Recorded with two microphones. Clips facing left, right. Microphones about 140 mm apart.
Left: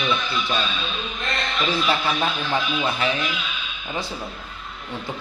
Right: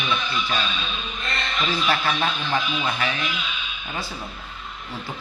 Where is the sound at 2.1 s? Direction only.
Centre (ahead or behind).